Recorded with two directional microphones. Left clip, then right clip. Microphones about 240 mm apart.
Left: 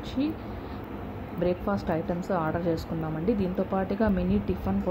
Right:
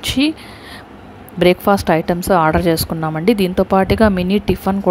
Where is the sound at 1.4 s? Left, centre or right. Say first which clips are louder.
Right 15 dB; right.